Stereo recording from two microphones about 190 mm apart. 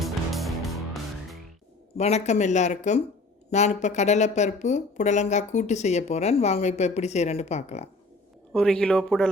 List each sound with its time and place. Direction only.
0.0 s music: centre (ahead or behind)
2.0 s speech: 35° left (ahead or behind)
8.5 s speech: 5° left (ahead or behind)